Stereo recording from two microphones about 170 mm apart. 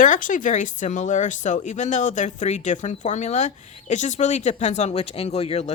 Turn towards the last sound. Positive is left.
turn(degrees=35)  # may be behind; listen again after turning